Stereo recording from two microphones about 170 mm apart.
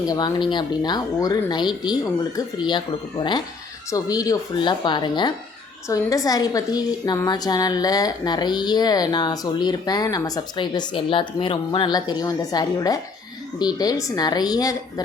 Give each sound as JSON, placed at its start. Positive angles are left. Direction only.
{"t": 0.0, "sound": "a woman's voice", "side_deg": 25}